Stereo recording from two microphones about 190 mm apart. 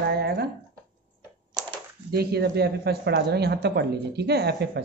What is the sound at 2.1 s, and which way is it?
Speech, 55° right (ahead or behind).